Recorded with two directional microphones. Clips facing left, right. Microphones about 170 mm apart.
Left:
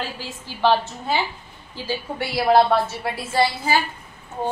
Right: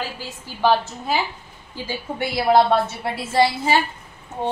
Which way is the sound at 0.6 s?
10° right (ahead or behind).